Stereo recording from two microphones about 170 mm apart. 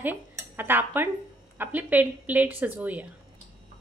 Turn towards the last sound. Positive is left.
turn(degrees=-10)  # may be behind; listen again after turning